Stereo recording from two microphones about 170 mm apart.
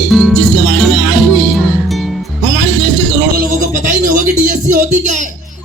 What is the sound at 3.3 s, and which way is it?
Music, 55° right (ahead or behind).